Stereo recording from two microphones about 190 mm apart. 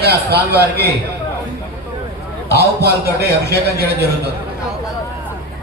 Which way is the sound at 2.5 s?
60° right (ahead or behind).